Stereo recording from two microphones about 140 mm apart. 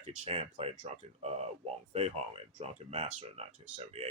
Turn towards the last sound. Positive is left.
turn(degrees=-45)  # may be behind; listen again after turning